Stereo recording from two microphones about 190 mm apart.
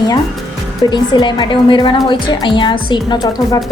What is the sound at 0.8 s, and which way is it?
A woman's voice, 20° left (ahead or behind).